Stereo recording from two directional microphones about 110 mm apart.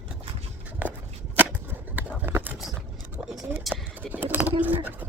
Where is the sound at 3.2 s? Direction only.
5° right (ahead or behind).